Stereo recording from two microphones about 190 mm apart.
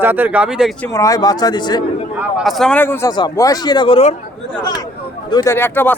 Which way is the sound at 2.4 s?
Centre (ahead or behind).